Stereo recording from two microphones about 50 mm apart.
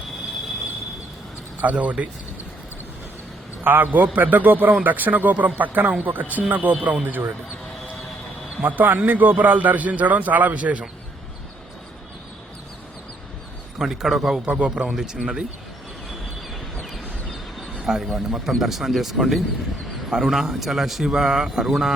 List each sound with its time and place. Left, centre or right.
1.6 s a man's voice: right
3.6 s a man's voice: right
8.6 s a man's voice: right
13.7 s speech: centre
14.4 s a man's voice: right
14.8 s speech: centre
16.8 s a sound: centre
17.8 s a man's voice: centre